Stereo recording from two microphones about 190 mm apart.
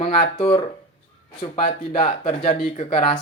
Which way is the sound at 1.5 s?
40° left (ahead or behind).